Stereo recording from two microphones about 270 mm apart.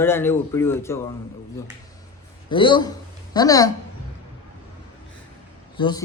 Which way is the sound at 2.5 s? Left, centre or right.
Centre.